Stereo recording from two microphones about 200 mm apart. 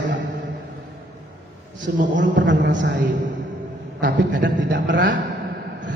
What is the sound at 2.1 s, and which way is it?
Speech, 65° right (ahead or behind).